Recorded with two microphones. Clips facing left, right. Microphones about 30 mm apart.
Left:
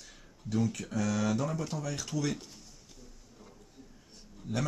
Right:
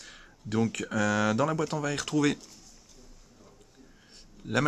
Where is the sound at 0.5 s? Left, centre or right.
Right.